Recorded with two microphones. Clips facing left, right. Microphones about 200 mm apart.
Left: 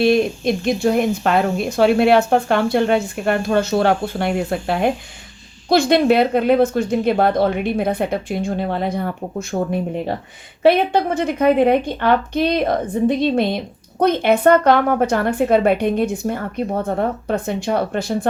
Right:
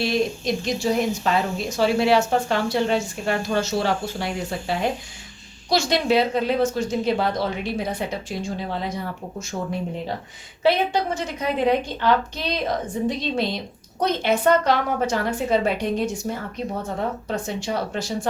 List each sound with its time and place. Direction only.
0.0 s speech: 55° left (ahead or behind)
10.6 s speech: 55° left (ahead or behind)